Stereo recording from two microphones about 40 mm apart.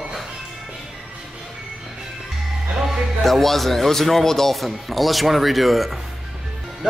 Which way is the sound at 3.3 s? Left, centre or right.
Centre.